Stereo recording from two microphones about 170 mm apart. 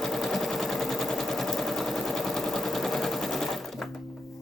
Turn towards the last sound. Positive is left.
turn(degrees=0)  # may be behind; listen again after turning